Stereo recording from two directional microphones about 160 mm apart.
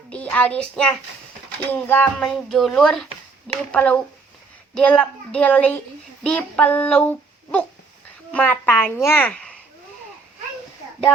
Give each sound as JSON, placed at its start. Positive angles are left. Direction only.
{"t": 0.1, "sound": "a child's voice", "side_deg": 10}